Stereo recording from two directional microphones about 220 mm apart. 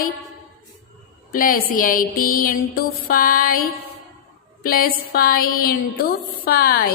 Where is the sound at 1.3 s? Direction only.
40° left (ahead or behind).